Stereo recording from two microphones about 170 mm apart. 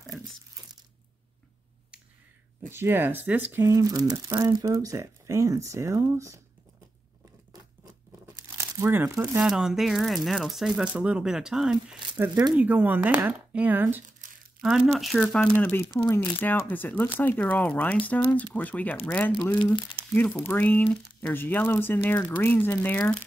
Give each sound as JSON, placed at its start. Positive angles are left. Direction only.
{"t": 2.7, "sound": "speech", "side_deg": -15}
{"t": 8.5, "sound": "speech", "side_deg": -20}
{"t": 9.4, "sound": "speech", "side_deg": -5}
{"t": 12.2, "sound": "speech", "side_deg": -15}
{"t": 19.6, "sound": "speech", "side_deg": 30}
{"t": 20.2, "sound": "speech", "side_deg": 10}